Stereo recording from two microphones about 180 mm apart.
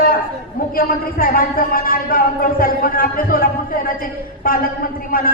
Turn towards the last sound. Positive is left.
turn(degrees=55)  # may be behind; listen again after turning